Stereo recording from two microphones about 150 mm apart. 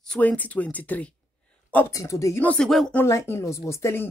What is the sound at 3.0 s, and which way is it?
Speech, 15° left (ahead or behind).